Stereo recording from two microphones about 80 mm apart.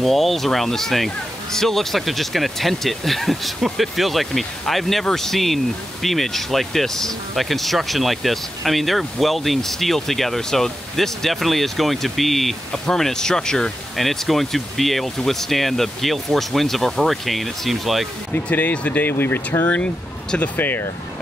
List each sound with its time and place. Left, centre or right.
0.0 s speech: centre
18.3 s speech: left
19.7 s speech: centre